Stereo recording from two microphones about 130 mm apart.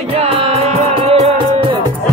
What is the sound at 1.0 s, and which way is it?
Music, 40° right (ahead or behind).